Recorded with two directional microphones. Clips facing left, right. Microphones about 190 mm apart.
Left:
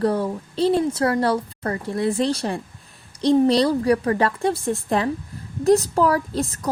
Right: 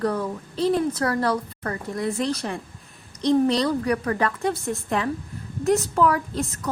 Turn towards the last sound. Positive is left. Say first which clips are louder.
# left 3 dB
turn(degrees=35)  # may be behind; listen again after turning